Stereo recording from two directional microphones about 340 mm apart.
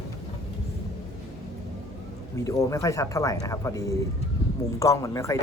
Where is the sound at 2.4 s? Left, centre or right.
Centre.